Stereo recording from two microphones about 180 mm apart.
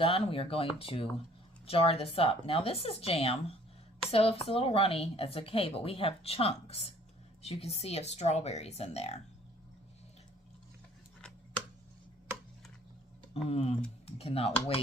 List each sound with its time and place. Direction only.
0.0 s a woman's voice: 30° left (ahead or behind)
13.3 s a woman's voice: 35° left (ahead or behind)